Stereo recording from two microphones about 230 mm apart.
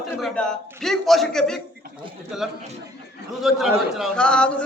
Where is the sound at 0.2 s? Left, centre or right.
Centre.